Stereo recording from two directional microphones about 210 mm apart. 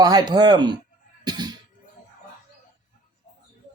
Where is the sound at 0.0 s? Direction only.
20° right (ahead or behind).